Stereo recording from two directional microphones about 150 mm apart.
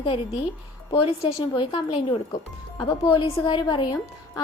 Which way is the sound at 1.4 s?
30° left (ahead or behind).